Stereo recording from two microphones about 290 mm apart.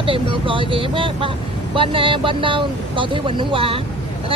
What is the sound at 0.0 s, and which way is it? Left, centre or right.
Speech, centre.